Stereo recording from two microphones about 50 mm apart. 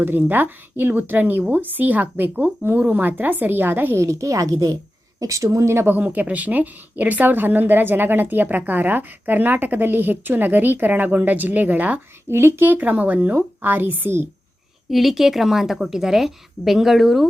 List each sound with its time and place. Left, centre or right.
0.3 s a woman's voice: right
3.9 s a woman's voice: right
5.9 s a woman's voice: right
12.3 s speech: right
12.8 s a woman's voice: right
13.3 s a woman's voice: right
14.8 s a woman's voice: centre